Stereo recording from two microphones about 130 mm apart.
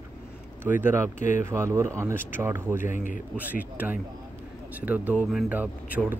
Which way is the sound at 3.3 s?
10° right (ahead or behind).